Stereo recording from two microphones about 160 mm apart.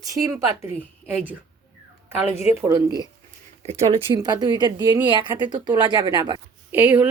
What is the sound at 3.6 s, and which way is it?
Speech, 40° right (ahead or behind).